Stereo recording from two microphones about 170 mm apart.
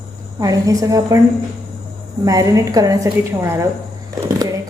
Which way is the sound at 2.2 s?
20° right (ahead or behind).